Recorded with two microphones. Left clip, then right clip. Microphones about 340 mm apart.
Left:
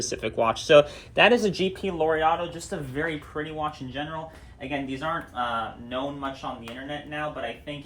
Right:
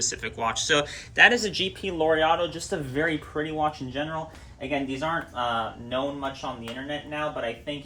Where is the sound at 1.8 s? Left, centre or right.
Centre.